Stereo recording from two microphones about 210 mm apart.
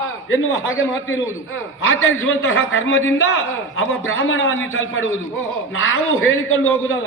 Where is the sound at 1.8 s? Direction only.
70° left (ahead or behind).